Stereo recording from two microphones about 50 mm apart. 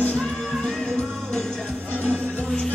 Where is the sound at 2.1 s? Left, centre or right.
Centre.